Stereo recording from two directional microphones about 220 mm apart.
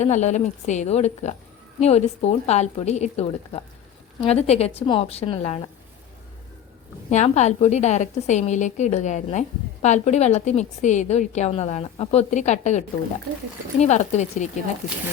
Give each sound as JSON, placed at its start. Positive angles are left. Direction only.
{"t": 0.0, "sound": "a woman's voice", "side_deg": 30}
{"t": 7.1, "sound": "a woman's voice", "side_deg": 30}